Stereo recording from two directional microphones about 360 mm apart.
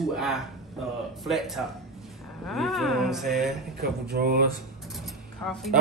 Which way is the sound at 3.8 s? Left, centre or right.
Right.